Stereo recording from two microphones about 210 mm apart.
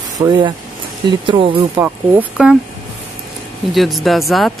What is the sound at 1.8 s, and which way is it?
Speech, 10° right (ahead or behind).